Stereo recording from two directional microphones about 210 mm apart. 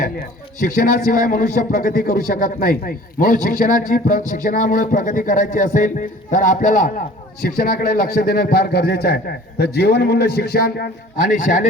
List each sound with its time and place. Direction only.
0.0 s a man's voice: 40° left (ahead or behind)
11.3 s speech: 35° left (ahead or behind)